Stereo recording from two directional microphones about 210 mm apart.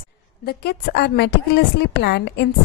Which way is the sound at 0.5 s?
50° left (ahead or behind).